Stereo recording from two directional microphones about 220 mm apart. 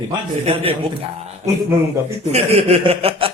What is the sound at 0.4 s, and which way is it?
Speech, 25° right (ahead or behind).